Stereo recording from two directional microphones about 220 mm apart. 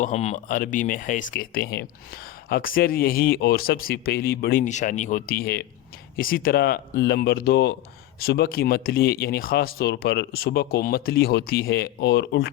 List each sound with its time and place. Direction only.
0.0 s speech: 30° left (ahead or behind); by 12.5 s 50° left (ahead or behind)